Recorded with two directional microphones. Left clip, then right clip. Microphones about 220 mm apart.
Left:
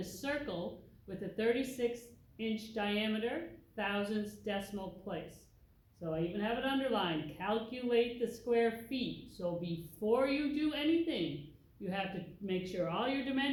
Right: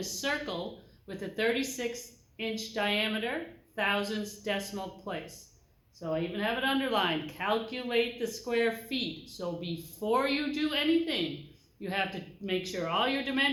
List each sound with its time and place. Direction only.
0.0 s speech: 40° right (ahead or behind)